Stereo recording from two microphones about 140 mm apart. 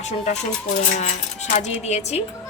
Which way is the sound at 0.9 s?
60° left (ahead or behind).